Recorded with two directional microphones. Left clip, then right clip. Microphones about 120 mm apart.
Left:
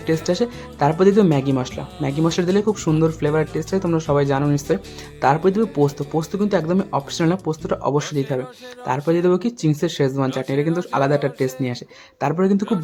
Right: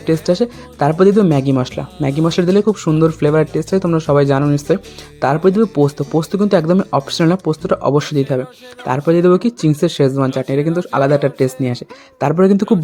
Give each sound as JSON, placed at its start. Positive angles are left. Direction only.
{"t": 0.0, "sound": "speech", "side_deg": -30}
{"t": 4.4, "sound": "speech", "side_deg": -30}